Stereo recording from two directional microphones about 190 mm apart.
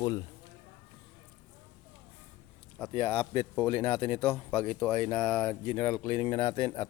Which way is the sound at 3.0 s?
5° left (ahead or behind).